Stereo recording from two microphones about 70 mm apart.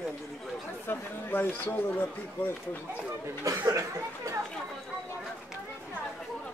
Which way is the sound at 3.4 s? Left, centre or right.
Right.